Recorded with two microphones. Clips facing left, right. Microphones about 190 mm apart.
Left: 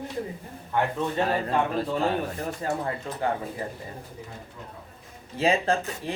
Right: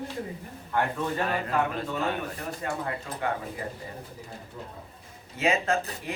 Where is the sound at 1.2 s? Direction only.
30° left (ahead or behind).